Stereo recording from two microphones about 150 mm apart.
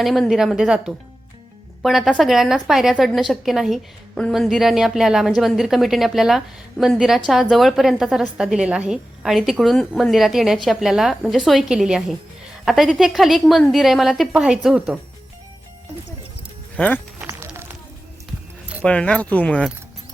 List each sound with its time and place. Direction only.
0.0 s a woman's voice: centre (ahead or behind)
16.7 s speech: 10° left (ahead or behind)
17.2 s run: 15° right (ahead or behind)
18.9 s speech: 5° left (ahead or behind)